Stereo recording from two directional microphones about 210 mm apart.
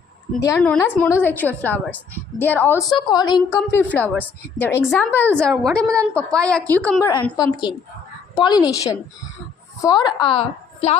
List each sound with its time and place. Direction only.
0.4 s a woman's voice: 15° left (ahead or behind)
7.1 s a woman's voice: 20° left (ahead or behind)
9.8 s a woman's voice: 20° left (ahead or behind)